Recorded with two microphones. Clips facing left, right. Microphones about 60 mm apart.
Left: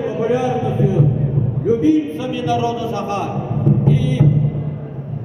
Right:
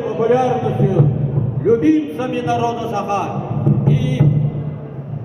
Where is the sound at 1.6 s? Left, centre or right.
Right.